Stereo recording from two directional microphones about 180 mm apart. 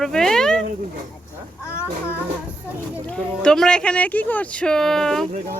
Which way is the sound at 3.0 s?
5° left (ahead or behind).